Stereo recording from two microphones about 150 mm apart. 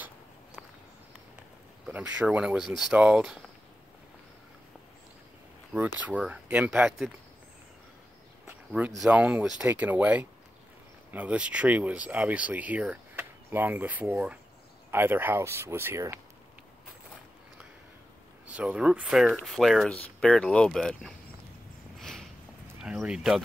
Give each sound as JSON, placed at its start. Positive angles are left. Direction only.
{"t": 1.9, "sound": "speech", "side_deg": -5}
{"t": 5.7, "sound": "speech", "side_deg": -10}
{"t": 8.5, "sound": "speech", "side_deg": -10}
{"t": 18.5, "sound": "speech", "side_deg": -10}
{"t": 22.0, "sound": "a sound", "side_deg": 0}
{"t": 22.8, "sound": "speech", "side_deg": -5}